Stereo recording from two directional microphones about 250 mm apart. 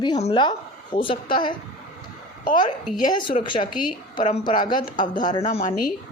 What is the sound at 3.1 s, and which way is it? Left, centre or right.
A woman's voice, centre.